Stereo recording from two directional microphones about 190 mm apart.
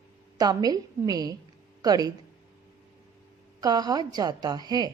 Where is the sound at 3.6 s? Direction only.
20° right (ahead or behind).